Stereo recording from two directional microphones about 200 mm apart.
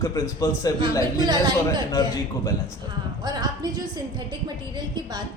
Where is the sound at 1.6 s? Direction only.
15° left (ahead or behind).